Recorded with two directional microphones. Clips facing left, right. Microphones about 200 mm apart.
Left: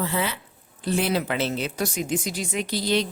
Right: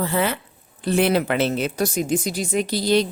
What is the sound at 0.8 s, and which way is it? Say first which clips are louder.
A woman's voice: right 5 dB; 60° right (ahead or behind).